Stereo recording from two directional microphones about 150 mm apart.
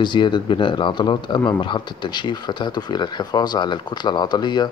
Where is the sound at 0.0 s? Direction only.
30° left (ahead or behind).